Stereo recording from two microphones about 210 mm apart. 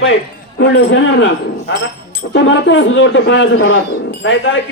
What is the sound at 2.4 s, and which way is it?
A man's voice, 60° left (ahead or behind).